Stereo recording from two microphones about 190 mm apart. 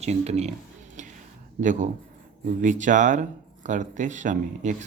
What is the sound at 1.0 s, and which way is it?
Whispering, 40° right (ahead or behind).